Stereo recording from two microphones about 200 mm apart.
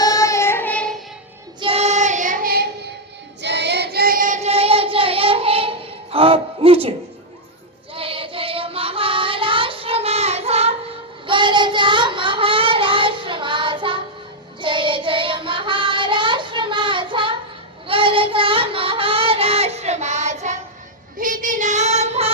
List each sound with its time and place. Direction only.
0.0 s child singing: 15° left (ahead or behind)
1.6 s child singing: 30° right (ahead or behind); by 2.6 s 45° right (ahead or behind)
3.4 s child singing: 60° right (ahead or behind); by 6.9 s 30° right (ahead or behind)
7.9 s child singing: 25° right (ahead or behind)
21.2 s female singing: 45° right (ahead or behind)